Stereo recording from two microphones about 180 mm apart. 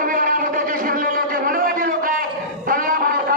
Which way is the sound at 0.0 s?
50° right (ahead or behind).